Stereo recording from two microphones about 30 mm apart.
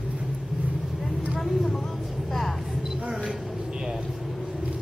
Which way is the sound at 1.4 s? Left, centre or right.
Centre.